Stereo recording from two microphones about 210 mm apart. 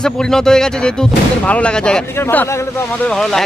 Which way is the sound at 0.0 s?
5° left (ahead or behind).